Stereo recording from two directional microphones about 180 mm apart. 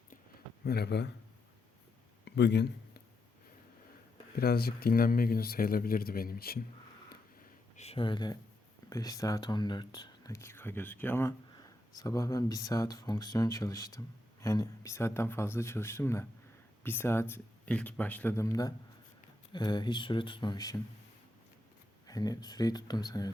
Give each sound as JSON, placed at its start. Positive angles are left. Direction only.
{"t": 0.6, "sound": "speech", "side_deg": 60}
{"t": 2.2, "sound": "a sound", "side_deg": 70}
{"t": 4.4, "sound": "speech", "side_deg": 60}
{"t": 7.8, "sound": "speech", "side_deg": 30}
{"t": 22.0, "sound": "speech", "side_deg": 20}